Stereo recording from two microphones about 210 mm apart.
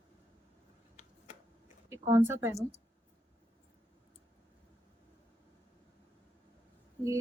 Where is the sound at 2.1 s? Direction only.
10° right (ahead or behind).